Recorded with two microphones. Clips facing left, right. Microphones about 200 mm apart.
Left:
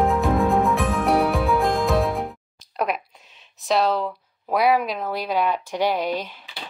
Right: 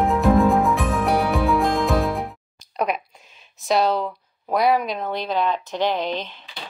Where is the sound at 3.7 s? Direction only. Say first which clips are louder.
Right 1 dB; centre (ahead or behind).